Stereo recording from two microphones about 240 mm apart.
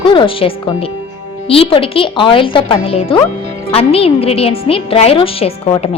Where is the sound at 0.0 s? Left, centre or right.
Left.